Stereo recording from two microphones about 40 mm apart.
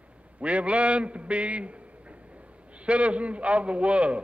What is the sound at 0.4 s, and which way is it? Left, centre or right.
A man's voice, right.